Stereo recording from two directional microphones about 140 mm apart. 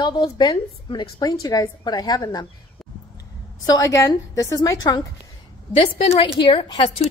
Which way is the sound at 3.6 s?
25° left (ahead or behind).